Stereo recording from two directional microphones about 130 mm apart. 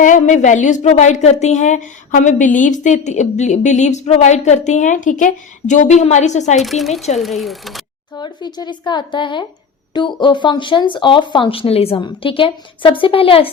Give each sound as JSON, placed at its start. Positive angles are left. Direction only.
{"t": 0.0, "sound": "a woman's voice", "side_deg": 75}
{"t": 6.6, "sound": "speech", "side_deg": 0}
{"t": 8.2, "sound": "speech", "side_deg": 35}
{"t": 11.9, "sound": "a woman's voice", "side_deg": 40}